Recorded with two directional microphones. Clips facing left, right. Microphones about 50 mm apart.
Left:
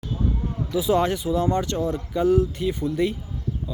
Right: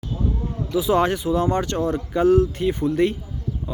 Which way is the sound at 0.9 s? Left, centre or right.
Right.